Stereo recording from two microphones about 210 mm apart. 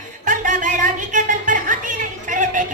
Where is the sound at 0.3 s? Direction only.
40° right (ahead or behind).